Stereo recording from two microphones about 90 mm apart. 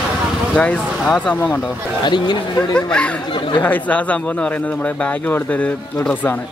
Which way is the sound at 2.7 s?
10° left (ahead or behind).